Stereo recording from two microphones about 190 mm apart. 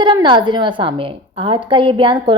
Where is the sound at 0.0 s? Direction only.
25° right (ahead or behind).